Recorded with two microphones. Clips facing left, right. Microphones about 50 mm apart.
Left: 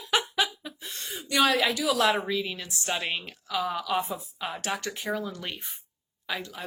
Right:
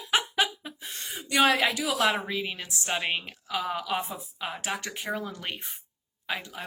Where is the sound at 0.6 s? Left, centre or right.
Right.